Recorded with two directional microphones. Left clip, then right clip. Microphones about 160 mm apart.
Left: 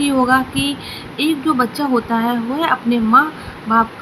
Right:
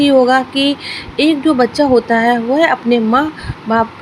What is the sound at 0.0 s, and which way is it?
Speech, 40° right (ahead or behind).